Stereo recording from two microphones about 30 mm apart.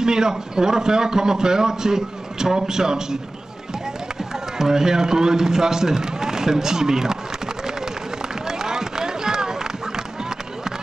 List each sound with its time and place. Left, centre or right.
0.0 s a man's voice: right
4.6 s a man's voice: centre
8.5 s run: centre